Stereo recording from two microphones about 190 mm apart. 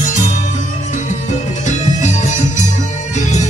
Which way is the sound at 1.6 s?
40° left (ahead or behind).